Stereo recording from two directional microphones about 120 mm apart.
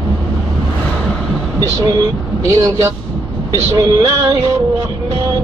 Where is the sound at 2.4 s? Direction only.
30° right (ahead or behind).